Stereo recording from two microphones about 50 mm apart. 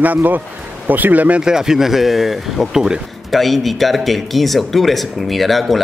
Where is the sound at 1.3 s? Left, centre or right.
Centre.